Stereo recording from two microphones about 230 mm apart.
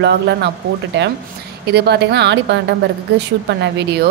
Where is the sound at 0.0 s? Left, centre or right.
Right.